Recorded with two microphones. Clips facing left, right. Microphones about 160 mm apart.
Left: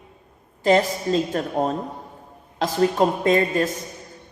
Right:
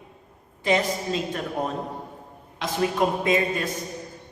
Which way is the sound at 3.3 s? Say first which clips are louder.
Left 4 dB; 40° left (ahead or behind).